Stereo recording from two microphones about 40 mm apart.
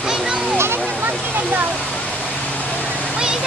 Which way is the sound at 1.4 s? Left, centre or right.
Right.